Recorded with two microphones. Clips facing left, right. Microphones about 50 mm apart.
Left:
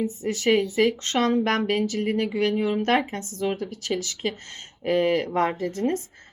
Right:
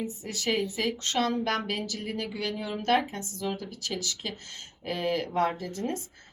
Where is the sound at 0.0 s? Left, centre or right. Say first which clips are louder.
Left 8 dB; left.